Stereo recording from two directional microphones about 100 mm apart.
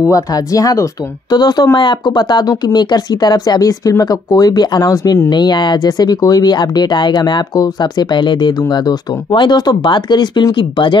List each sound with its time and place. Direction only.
0.0 s speech: 35° left (ahead or behind); by 11.0 s 55° left (ahead or behind)